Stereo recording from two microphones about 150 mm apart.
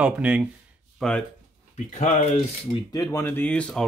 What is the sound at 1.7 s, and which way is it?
Speech, 50° left (ahead or behind).